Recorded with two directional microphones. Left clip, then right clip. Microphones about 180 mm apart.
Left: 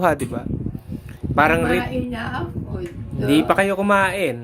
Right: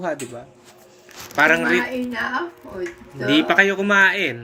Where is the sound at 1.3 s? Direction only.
45° left (ahead or behind).